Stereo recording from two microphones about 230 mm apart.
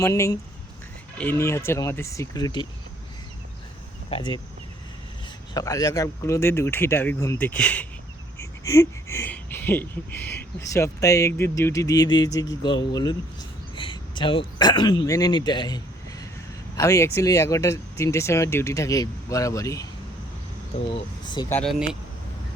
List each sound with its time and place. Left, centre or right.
0.0 s speech: centre
4.1 s speech: left
5.5 s speech: centre
21.5 s speech: centre